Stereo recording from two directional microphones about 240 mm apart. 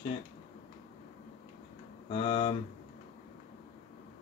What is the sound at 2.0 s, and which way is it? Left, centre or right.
Speech, left.